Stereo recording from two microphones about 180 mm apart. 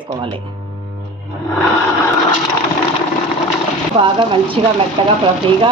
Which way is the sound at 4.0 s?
30° right (ahead or behind).